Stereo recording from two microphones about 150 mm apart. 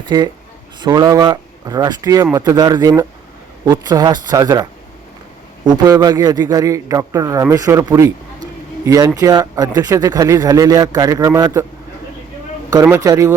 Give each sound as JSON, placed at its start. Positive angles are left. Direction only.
{"t": 0.0, "sound": "speech", "side_deg": -25}
{"t": 5.6, "sound": "speech", "side_deg": -25}
{"t": 12.7, "sound": "speech", "side_deg": -20}